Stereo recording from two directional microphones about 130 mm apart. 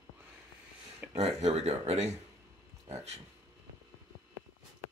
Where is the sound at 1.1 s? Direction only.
55° right (ahead or behind).